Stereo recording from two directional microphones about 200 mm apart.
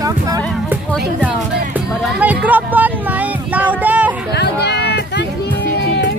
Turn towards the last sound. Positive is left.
turn(degrees=55)  # may be behind; listen again after turning